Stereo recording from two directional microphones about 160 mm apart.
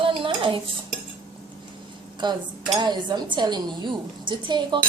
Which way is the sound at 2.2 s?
30° right (ahead or behind).